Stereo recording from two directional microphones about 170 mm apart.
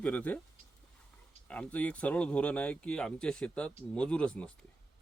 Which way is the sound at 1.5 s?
10° left (ahead or behind).